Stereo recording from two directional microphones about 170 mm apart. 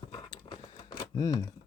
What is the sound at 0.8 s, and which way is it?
Typewriter, 20° left (ahead or behind).